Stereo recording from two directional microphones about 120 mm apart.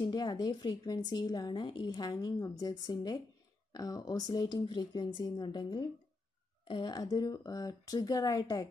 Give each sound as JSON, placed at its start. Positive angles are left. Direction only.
{"t": 0.0, "sound": "a woman's voice", "side_deg": 35}